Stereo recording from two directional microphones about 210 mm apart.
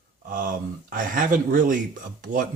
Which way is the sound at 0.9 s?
40° right (ahead or behind).